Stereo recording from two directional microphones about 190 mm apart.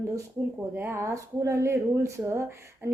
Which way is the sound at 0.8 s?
15° right (ahead or behind).